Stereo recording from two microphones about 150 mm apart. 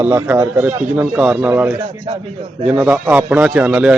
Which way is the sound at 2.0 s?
35° right (ahead or behind).